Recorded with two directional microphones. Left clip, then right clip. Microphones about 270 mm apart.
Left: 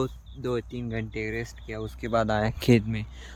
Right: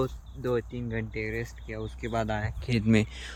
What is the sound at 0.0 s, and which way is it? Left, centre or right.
Speech, centre.